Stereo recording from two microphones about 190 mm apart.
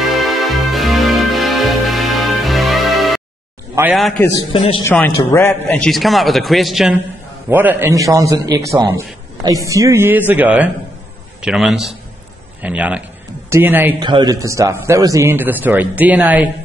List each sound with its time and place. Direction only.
0.0 s music: centre (ahead or behind)
4.5 s a man's voice: 30° left (ahead or behind)
4.8 s a man's voice: 10° left (ahead or behind); by 13.9 s 10° right (ahead or behind)
13.9 s a man's voice: 25° right (ahead or behind)